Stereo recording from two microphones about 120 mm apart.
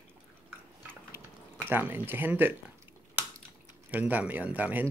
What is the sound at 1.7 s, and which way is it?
Speech, 15° right (ahead or behind).